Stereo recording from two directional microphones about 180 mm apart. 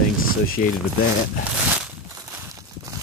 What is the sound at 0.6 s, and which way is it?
Speech, 50° left (ahead or behind).